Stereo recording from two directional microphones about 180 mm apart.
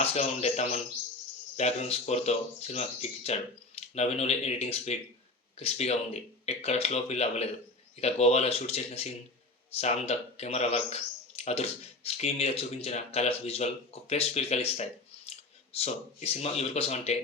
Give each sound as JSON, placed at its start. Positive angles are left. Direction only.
{"t": 0.0, "sound": "speech", "side_deg": 35}
{"t": 11.3, "sound": "a sound", "side_deg": 35}
{"t": 12.0, "sound": "speech", "side_deg": 35}